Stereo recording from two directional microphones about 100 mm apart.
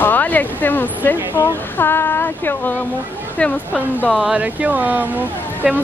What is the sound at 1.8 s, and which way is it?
Speech, 25° left (ahead or behind).